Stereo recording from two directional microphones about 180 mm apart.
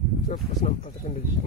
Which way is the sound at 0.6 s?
35° left (ahead or behind).